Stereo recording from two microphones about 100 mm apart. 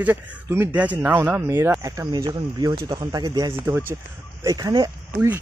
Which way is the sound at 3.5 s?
25° right (ahead or behind).